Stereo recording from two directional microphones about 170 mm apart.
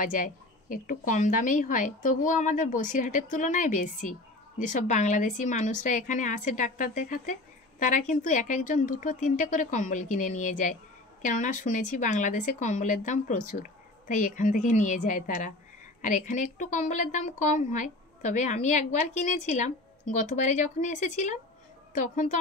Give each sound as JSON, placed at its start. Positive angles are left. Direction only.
{"t": 0.0, "sound": "a woman's voice", "side_deg": 50}